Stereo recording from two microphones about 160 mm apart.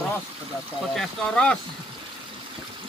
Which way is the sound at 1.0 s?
5° left (ahead or behind).